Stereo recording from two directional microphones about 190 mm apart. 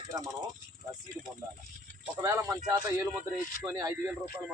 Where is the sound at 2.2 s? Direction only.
15° right (ahead or behind).